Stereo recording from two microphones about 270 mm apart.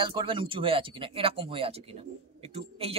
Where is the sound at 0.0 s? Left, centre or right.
Centre.